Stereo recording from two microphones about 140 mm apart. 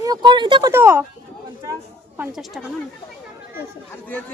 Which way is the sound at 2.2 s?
5° right (ahead or behind).